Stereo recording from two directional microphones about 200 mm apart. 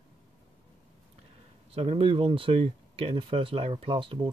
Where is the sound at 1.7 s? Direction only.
30° right (ahead or behind).